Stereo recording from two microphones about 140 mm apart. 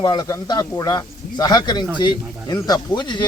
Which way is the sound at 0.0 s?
30° left (ahead or behind).